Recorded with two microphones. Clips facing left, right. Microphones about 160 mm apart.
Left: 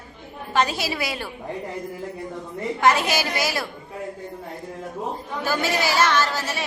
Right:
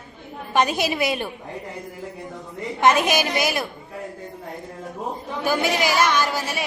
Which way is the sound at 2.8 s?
20° right (ahead or behind).